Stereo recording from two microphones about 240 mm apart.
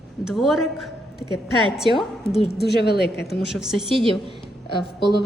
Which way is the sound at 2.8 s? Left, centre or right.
Left.